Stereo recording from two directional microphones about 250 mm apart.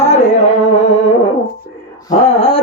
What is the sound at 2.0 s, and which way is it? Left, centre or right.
Music, left.